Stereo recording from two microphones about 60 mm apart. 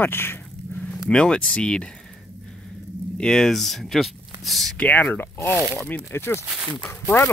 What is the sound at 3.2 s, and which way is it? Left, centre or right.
Speech, centre.